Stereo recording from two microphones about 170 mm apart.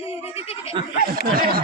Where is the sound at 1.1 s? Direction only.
60° right (ahead or behind).